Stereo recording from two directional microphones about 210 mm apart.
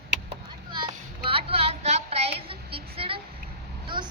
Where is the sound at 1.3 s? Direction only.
25° right (ahead or behind).